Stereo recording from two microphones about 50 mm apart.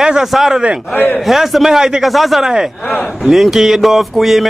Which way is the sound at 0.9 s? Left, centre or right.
Left.